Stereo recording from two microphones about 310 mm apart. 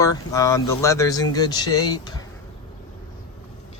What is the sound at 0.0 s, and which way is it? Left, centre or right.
Speech, centre.